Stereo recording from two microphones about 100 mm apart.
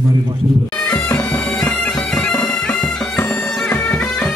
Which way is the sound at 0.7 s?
15° left (ahead or behind).